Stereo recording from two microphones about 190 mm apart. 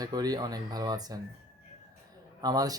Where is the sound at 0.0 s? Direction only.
20° right (ahead or behind).